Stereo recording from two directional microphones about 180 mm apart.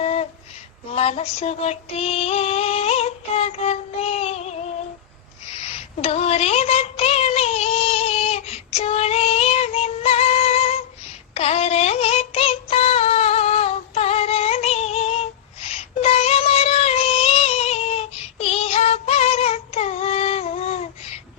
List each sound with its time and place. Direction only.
0.0 s female singing: 35° left (ahead or behind)
5.6 s a sound: 35° left (ahead or behind)
11.3 s synthetic singing: 35° left (ahead or behind)